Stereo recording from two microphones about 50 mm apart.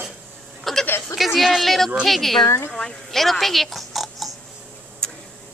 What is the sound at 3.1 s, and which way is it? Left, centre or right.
Oink, centre.